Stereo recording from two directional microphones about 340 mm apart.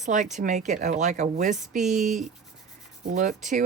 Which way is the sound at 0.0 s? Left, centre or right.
Right.